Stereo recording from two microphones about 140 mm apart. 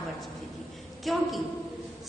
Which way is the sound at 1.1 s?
Centre (ahead or behind).